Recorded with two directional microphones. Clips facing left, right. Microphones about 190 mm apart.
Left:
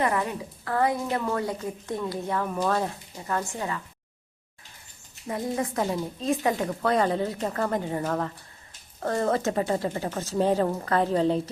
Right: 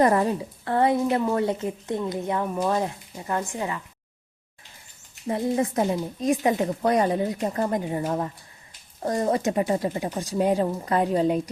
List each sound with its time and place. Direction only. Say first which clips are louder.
0.0 s a woman's voice: right 6 dB; 35° right (ahead or behind); by 3.5 s 20° right (ahead or behind)
5.3 s a woman's voice: right 4 dB; 25° right (ahead or behind)